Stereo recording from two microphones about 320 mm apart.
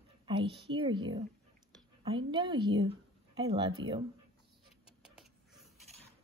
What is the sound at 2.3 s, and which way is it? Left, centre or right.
A woman's voice, centre.